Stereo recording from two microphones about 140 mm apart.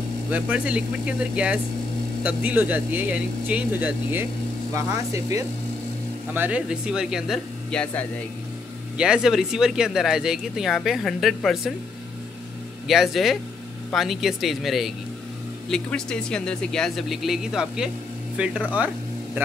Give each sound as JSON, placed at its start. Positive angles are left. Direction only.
{"t": 0.3, "sound": "speech", "side_deg": -10}
{"t": 6.3, "sound": "speech", "side_deg": -10}
{"t": 7.7, "sound": "speech", "side_deg": 10}
{"t": 8.9, "sound": "speech", "side_deg": -5}
{"t": 12.8, "sound": "speech", "side_deg": 0}